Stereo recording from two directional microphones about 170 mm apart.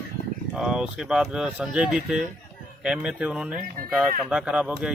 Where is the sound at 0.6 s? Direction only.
5° right (ahead or behind).